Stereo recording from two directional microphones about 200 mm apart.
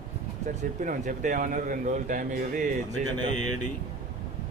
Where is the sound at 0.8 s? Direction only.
40° right (ahead or behind).